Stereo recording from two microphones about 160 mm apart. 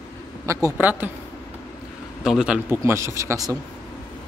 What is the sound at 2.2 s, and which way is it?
Speech, 5° right (ahead or behind).